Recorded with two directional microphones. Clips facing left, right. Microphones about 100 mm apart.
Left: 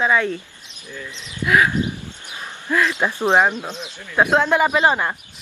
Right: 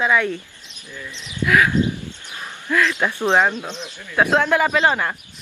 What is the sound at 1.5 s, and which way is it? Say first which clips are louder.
Speech: even; 20° left (ahead or behind).